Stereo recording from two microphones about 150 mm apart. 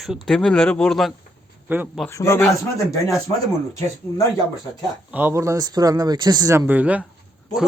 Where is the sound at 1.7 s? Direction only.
10° right (ahead or behind).